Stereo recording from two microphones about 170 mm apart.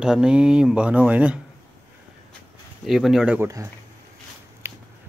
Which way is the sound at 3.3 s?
20° right (ahead or behind).